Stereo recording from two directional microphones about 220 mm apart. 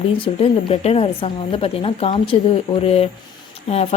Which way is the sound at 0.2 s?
25° left (ahead or behind).